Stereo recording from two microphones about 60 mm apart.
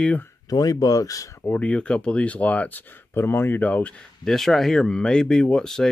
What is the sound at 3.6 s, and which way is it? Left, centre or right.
Speech, left.